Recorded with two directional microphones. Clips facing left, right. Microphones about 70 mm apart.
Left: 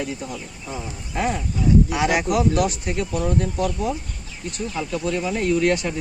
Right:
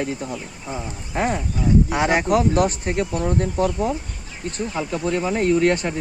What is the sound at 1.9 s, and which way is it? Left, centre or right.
Speech, right.